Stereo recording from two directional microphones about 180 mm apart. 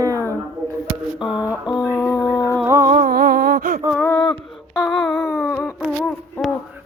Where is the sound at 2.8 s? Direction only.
50° right (ahead or behind).